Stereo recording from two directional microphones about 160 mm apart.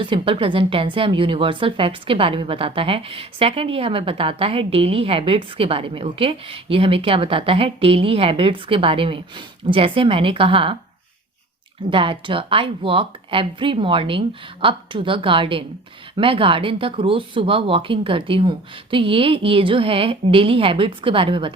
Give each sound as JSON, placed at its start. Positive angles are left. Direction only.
{"t": 0.0, "sound": "speech", "side_deg": -30}
{"t": 11.9, "sound": "speech", "side_deg": -35}